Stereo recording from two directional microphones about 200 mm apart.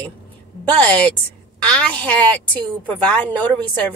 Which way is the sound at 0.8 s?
5° left (ahead or behind).